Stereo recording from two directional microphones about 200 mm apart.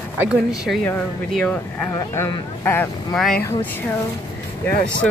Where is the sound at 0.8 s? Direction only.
5° left (ahead or behind).